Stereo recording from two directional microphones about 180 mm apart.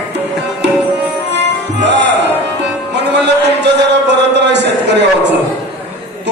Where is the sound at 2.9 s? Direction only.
70° right (ahead or behind).